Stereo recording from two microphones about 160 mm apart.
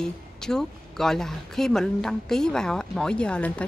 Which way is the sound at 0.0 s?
5° left (ahead or behind).